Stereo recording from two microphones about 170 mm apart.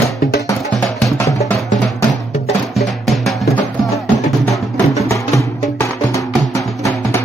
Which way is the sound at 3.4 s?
20° left (ahead or behind).